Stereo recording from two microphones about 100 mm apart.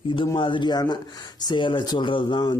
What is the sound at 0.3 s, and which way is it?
Speech, 55° left (ahead or behind).